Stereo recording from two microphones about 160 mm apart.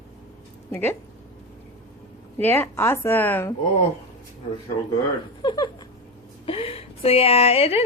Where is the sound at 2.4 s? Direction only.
15° left (ahead or behind).